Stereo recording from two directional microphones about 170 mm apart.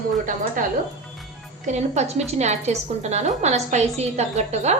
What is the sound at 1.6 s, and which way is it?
A woman's voice, 40° right (ahead or behind).